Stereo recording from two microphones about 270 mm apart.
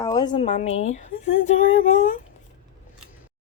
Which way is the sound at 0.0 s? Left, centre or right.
Centre.